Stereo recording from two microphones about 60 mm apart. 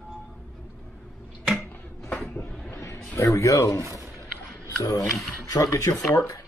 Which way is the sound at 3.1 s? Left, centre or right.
Left.